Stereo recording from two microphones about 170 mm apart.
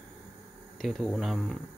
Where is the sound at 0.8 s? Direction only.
Centre (ahead or behind).